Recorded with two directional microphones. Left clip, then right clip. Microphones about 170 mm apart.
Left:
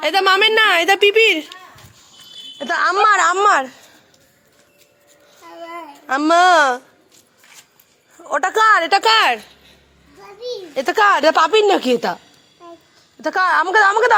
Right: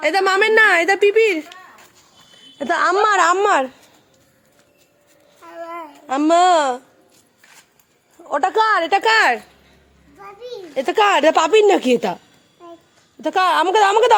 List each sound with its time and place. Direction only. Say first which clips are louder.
0.0 s a woman's voice: left 2 dB; centre (ahead or behind)
2.6 s speech: left 1 dB; 40° right (ahead or behind); by 3.7 s 15° right (ahead or behind)
5.7 s a child's voice: left 2 dB; 10° right (ahead or behind)
8.3 s a woman's voice: left 2 dB; 10° right (ahead or behind)
10.5 s a woman's voice: left 1 dB; 20° right (ahead or behind); by 12.2 s 35° right (ahead or behind)
13.2 s a woman's voice: even; 35° right (ahead or behind)